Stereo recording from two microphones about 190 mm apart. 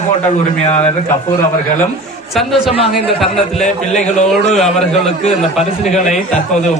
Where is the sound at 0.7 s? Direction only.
35° left (ahead or behind).